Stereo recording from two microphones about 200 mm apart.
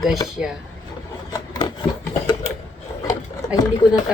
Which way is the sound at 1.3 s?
20° left (ahead or behind).